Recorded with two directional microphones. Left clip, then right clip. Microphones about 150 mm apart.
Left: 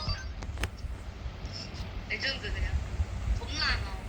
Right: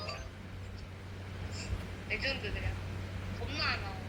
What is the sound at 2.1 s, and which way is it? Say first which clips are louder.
Vehicle: left 2 dB; 25° right (ahead or behind).